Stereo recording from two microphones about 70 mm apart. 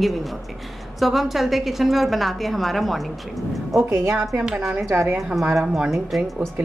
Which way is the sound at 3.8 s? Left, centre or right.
Right.